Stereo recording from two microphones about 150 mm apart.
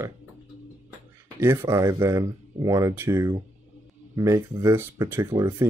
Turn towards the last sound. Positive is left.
turn(degrees=-20)  # may be behind; listen again after turning